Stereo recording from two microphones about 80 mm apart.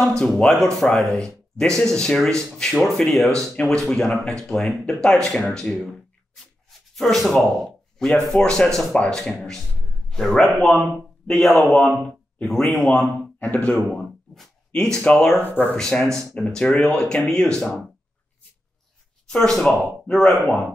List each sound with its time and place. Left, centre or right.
0.0 s speech: centre
7.0 s speech: centre
14.3 s a sound: centre
15.0 s speech: centre
15.4 s speech: left
15.7 s speech: centre
19.2 s speech: centre